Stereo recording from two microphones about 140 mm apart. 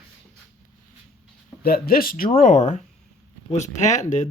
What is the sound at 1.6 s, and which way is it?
Speech, 90° left.